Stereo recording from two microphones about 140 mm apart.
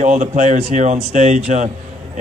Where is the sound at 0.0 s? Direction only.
55° right (ahead or behind).